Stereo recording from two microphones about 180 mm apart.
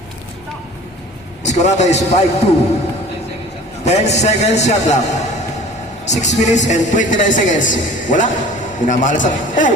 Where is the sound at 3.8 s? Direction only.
40° left (ahead or behind).